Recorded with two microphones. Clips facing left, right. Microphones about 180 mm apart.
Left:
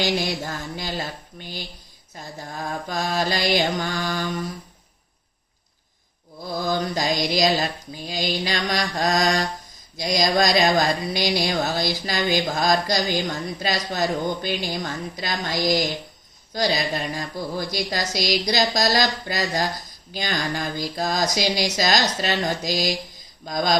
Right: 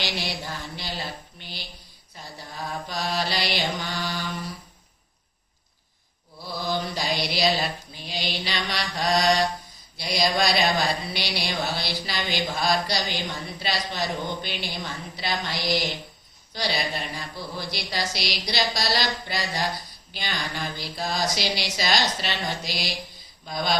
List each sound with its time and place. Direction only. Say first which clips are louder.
0.0 s speech: left 7 dB; 45° left (ahead or behind)
6.4 s speech: left 4 dB; 45° left (ahead or behind)